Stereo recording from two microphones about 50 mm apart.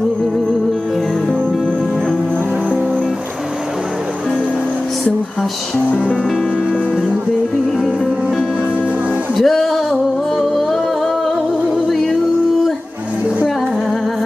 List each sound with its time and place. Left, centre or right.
5.9 s music: left
7.8 s music: centre